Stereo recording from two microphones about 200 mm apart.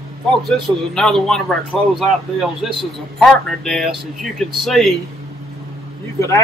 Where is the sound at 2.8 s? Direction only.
Centre (ahead or behind).